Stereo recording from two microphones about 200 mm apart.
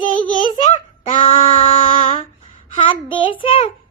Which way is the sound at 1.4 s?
25° left (ahead or behind).